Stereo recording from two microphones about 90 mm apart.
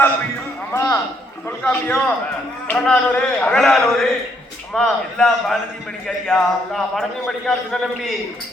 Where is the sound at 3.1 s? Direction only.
20° left (ahead or behind).